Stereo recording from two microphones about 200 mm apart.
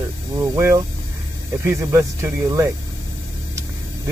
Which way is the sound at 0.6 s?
15° right (ahead or behind).